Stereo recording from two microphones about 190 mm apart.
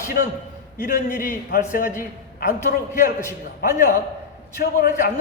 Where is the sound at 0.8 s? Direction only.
45° left (ahead or behind).